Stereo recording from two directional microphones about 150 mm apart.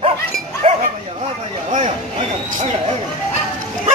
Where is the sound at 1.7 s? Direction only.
45° right (ahead or behind).